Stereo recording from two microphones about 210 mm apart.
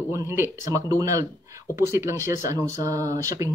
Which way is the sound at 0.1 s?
15° right (ahead or behind).